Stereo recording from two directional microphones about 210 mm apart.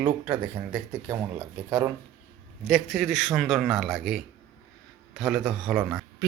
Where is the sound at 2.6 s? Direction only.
Centre (ahead or behind).